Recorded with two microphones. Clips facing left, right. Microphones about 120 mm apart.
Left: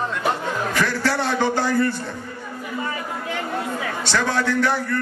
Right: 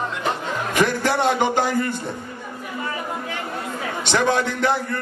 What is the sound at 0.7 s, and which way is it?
A man's voice, 20° right (ahead or behind).